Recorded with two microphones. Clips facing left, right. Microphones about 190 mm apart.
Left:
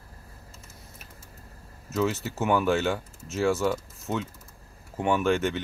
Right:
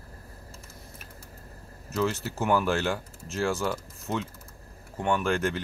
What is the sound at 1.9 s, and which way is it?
Speech, centre (ahead or behind).